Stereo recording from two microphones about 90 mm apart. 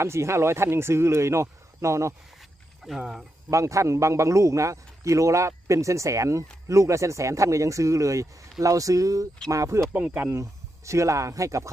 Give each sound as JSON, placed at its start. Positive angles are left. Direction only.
{"t": 0.0, "sound": "a man's voice", "side_deg": -30}
{"t": 2.4, "sound": "a sound", "side_deg": 0}
{"t": 3.0, "sound": "speech", "side_deg": -5}
{"t": 3.5, "sound": "a man's voice", "side_deg": -35}
{"t": 9.9, "sound": "speech", "side_deg": -15}
{"t": 10.2, "sound": "a man's voice", "side_deg": -35}